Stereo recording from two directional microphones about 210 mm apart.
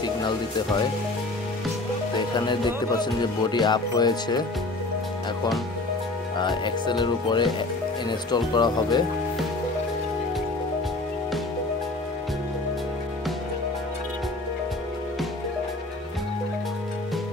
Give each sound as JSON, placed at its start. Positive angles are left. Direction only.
{"t": 0.0, "sound": "speech", "side_deg": 20}
{"t": 2.1, "sound": "speech", "side_deg": 20}
{"t": 6.3, "sound": "speech", "side_deg": 20}